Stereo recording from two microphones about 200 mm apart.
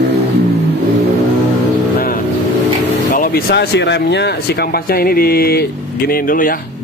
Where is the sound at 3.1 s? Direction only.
45° left (ahead or behind).